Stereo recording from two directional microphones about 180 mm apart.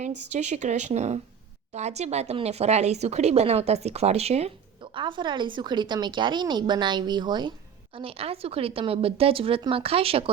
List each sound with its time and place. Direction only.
0.3 s speech: 40° right (ahead or behind)